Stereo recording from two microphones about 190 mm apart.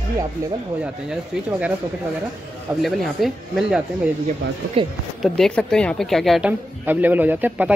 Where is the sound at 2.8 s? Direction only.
Centre (ahead or behind).